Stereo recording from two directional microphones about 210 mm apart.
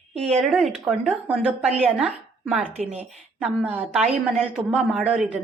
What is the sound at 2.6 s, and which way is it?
Speech, 30° right (ahead or behind).